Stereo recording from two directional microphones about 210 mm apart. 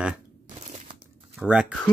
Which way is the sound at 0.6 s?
35° right (ahead or behind).